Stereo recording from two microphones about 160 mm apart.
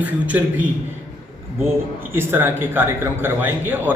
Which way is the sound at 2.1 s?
15° right (ahead or behind).